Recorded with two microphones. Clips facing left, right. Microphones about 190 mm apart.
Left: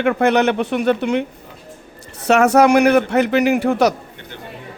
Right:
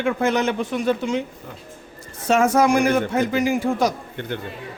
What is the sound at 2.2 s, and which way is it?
A man's voice, 70° left (ahead or behind).